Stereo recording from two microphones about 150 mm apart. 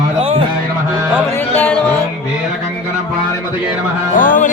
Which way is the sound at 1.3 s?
10° left (ahead or behind).